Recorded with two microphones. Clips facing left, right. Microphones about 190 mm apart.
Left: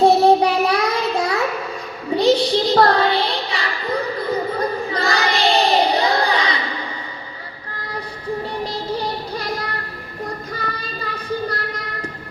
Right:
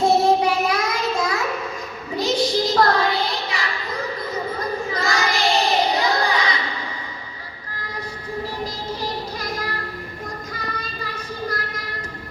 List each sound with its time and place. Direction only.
0.0 s child singing: 35° left (ahead or behind)